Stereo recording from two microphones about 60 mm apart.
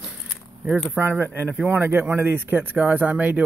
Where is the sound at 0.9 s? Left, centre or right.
Right.